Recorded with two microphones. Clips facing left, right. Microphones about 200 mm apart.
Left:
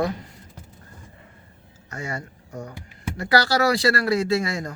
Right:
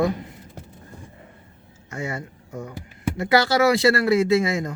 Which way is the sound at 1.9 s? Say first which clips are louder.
Right 2 dB; 20° right (ahead or behind).